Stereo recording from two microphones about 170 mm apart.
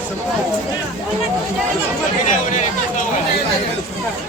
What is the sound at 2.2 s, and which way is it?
Speech, 50° left (ahead or behind).